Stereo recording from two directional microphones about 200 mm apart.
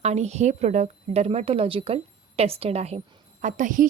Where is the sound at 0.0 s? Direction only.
35° right (ahead or behind).